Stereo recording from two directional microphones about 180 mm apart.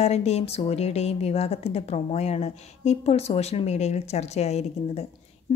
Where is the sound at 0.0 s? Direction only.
35° left (ahead or behind).